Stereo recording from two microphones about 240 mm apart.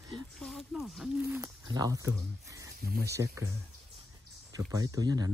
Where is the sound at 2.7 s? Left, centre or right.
Right.